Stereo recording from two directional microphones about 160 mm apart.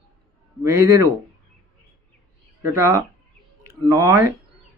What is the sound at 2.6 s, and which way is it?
Speech, 20° right (ahead or behind).